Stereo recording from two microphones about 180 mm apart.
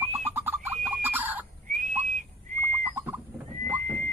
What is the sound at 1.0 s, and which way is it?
Chicken, 10° right (ahead or behind).